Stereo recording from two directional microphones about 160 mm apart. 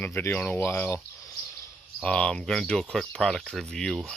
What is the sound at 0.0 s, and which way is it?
Speech, 15° left (ahead or behind).